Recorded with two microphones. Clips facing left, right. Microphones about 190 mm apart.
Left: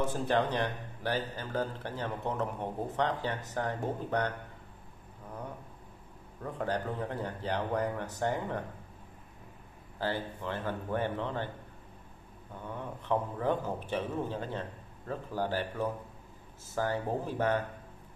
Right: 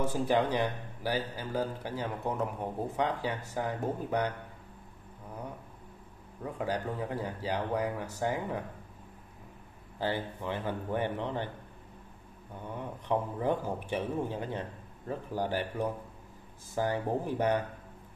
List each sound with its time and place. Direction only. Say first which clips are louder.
0.0 s a man's voice: right 1 dB; 10° right (ahead or behind)
6.4 s a man's voice: even; 10° right (ahead or behind)
9.9 s a man's voice: right 1 dB; 15° right (ahead or behind)
12.7 s a man's voice: even; 15° right (ahead or behind)